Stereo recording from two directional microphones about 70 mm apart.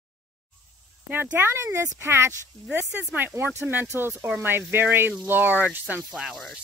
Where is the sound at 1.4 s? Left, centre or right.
Right.